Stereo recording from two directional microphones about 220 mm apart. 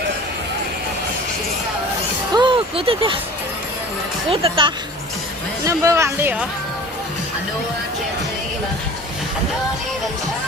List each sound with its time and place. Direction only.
2.3 s a sound: 20° right (ahead or behind)
4.3 s speech: 25° right (ahead or behind)
5.6 s speech: 15° right (ahead or behind)